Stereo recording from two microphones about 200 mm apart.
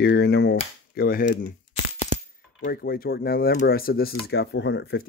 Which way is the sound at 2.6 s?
50° left (ahead or behind).